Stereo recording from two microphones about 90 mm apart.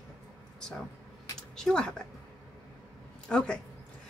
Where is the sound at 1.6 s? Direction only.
10° left (ahead or behind).